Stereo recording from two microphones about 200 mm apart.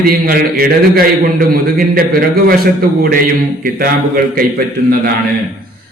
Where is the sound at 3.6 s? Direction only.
45° right (ahead or behind).